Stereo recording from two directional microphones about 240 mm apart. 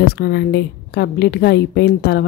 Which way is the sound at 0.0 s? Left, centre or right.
Left.